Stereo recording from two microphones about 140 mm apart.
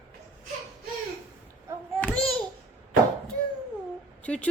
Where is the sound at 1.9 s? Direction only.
10° left (ahead or behind).